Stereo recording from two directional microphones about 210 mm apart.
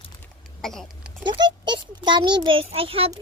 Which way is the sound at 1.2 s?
20° right (ahead or behind).